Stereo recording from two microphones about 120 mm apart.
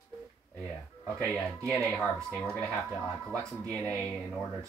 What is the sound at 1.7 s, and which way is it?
Speech, 10° left (ahead or behind).